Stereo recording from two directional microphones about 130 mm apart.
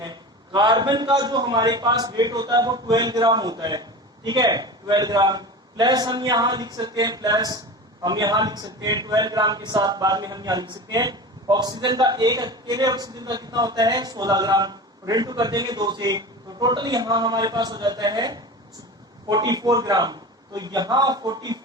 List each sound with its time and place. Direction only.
0.0 s a man's voice: 35° right (ahead or behind)